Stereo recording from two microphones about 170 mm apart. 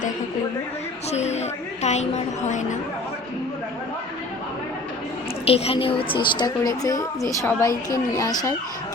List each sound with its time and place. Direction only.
1.1 s a woman's voice: 40° left (ahead or behind)
5.5 s a woman's voice: 35° left (ahead or behind); by 8.5 s 20° left (ahead or behind)